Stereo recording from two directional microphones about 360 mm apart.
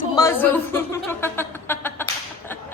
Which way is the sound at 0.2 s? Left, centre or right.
Centre.